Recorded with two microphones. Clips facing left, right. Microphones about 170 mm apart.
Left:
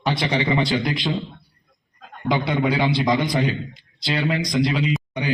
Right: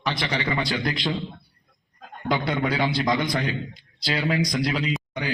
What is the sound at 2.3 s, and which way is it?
Speech, centre (ahead or behind).